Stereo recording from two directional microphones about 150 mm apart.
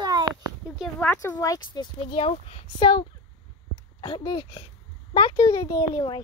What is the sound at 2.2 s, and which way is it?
Speech, 45° left (ahead or behind).